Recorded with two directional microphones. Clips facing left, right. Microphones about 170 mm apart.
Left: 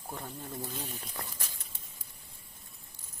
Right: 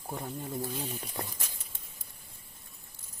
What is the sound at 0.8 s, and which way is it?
Speech, 20° right (ahead or behind).